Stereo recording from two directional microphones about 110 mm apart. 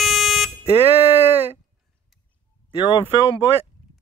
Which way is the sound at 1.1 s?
20° right (ahead or behind).